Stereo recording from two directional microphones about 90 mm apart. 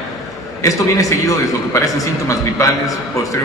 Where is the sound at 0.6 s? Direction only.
35° left (ahead or behind).